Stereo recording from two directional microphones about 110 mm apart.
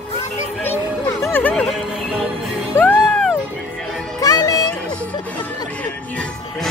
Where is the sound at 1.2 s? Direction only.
20° left (ahead or behind).